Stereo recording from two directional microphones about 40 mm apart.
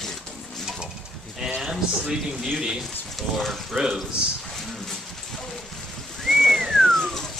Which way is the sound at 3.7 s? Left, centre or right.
Centre.